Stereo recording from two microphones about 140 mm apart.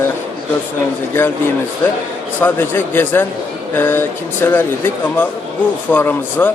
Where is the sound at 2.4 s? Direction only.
15° left (ahead or behind).